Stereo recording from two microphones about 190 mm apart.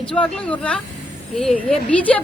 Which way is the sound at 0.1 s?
5° left (ahead or behind).